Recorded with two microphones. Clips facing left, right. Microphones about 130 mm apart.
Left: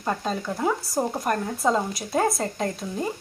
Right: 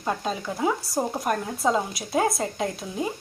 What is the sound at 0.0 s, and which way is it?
Speech, 5° right (ahead or behind).